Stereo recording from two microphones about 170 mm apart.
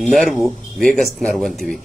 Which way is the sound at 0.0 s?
Centre (ahead or behind).